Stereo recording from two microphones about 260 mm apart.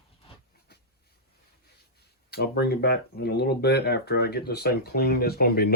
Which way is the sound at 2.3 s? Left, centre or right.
Left.